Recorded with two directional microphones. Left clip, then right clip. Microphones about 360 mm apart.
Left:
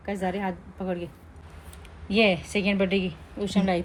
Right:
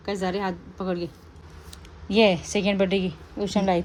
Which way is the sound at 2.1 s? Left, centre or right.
Right.